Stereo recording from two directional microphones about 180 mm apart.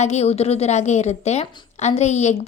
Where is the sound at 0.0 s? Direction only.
40° left (ahead or behind).